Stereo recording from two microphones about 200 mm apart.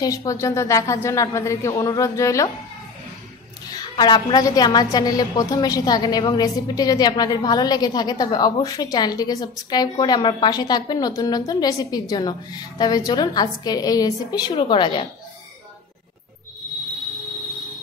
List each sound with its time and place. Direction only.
0.0 s speech: 15° left (ahead or behind)
3.6 s a woman's voice: 20° left (ahead or behind)